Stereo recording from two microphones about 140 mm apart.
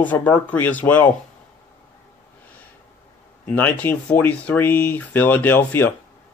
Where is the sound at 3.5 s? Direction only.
10° left (ahead or behind).